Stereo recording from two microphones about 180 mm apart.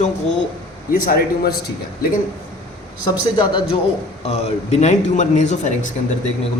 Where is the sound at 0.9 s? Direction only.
55° left (ahead or behind).